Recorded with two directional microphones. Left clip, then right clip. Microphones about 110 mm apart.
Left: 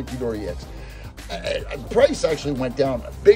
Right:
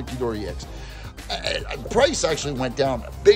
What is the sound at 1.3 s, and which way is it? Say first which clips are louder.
Speech: even; 70° right (ahead or behind).